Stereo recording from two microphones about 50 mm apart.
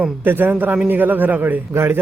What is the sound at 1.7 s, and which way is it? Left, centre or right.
Speech, right.